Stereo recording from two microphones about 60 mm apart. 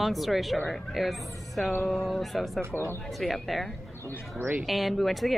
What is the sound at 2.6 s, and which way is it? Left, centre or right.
Speech, right.